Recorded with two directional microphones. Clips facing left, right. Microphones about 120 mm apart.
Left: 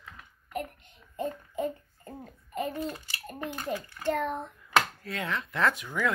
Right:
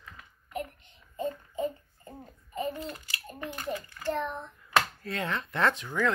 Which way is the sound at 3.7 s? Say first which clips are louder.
Left 3 dB; 90° left.